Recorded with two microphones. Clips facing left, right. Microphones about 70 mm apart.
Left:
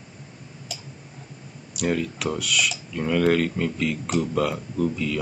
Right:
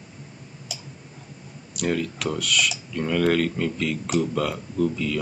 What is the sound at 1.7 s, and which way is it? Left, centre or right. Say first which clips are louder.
Speech: even; centre.